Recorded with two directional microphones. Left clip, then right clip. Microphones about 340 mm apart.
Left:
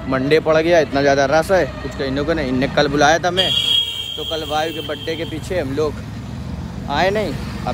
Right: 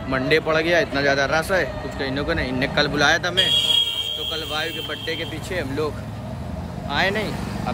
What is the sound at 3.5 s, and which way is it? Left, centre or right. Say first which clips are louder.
Speech: right 1 dB; right.